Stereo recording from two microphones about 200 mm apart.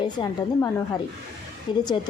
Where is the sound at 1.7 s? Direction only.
25° left (ahead or behind).